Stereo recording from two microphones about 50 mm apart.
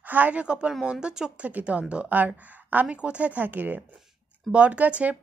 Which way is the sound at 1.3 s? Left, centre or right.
Right.